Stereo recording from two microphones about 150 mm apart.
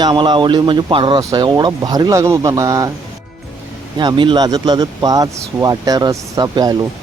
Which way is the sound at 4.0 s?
30° right (ahead or behind).